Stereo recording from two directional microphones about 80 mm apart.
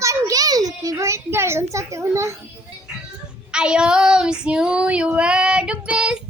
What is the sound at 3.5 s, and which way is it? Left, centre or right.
Female singing, centre.